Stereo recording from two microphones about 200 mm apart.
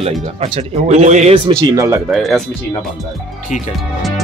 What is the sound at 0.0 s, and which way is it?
Speech, 30° right (ahead or behind).